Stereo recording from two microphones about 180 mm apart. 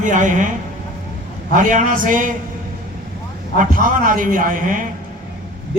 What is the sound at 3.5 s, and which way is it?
A man's voice, 50° right (ahead or behind).